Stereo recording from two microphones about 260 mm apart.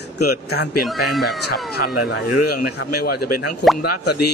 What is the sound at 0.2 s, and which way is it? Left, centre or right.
Speech, left.